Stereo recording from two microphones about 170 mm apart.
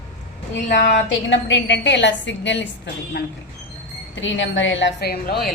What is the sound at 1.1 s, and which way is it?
A woman's voice, 90° left.